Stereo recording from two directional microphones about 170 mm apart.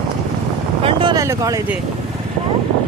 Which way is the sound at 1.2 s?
20° right (ahead or behind).